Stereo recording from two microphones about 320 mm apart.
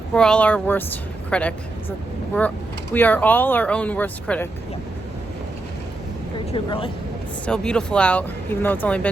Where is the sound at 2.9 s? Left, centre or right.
Centre.